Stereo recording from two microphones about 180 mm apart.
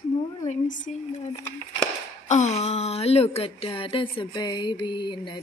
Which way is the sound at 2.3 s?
40° left (ahead or behind).